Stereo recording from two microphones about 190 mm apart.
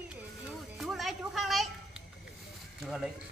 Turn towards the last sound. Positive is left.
turn(degrees=0)  # may be behind; listen again after turning